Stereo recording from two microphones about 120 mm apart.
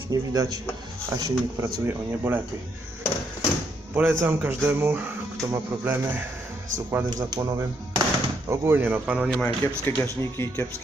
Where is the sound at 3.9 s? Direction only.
15° right (ahead or behind).